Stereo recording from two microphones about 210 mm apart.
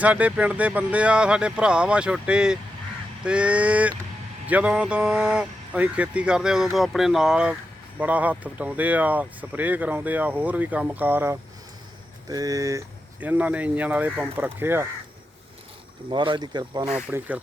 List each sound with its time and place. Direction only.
0.0 s speech: 5° right (ahead or behind)
16.0 s speech: 20° right (ahead or behind)
16.8 s speech: 5° right (ahead or behind)